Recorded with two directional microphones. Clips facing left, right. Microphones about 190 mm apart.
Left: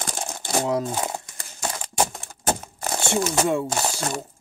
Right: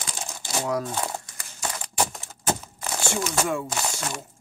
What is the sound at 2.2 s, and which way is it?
Keys jangling, 50° left (ahead or behind).